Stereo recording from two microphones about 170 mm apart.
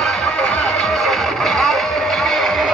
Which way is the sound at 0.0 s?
Centre (ahead or behind).